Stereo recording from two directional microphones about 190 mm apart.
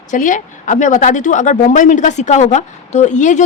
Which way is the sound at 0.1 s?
40° left (ahead or behind).